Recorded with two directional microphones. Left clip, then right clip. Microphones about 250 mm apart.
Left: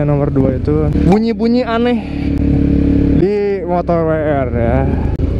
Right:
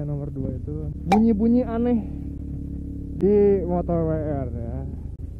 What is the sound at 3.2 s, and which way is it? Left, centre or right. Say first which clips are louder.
Speech: left 4 dB; centre.